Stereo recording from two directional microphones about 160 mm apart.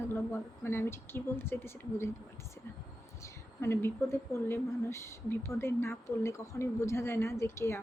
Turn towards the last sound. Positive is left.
turn(degrees=15)  # may be behind; listen again after turning